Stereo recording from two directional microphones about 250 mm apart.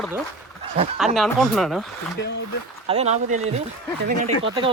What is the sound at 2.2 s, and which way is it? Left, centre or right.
Speech, left.